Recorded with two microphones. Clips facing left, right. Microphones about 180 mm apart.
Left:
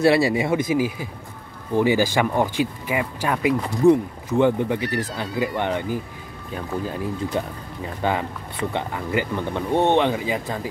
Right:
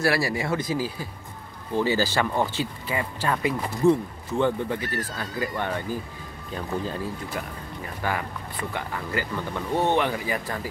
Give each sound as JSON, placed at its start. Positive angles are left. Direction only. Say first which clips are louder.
{"t": 0.0, "sound": "speech", "louder": "left 7 dB", "side_deg": 25}
{"t": 7.3, "sound": "speech", "louder": "left 6 dB", "side_deg": 20}